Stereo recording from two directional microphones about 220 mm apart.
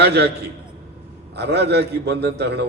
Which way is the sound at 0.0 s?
50° right (ahead or behind).